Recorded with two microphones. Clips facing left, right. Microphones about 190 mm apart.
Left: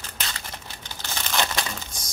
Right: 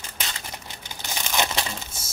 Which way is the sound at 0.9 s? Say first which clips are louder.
Even; 15° right (ahead or behind).